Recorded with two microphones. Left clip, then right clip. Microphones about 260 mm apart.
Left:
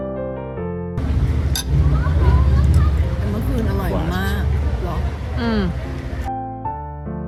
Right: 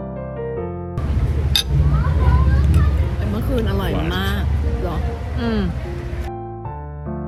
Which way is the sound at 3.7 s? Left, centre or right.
Right.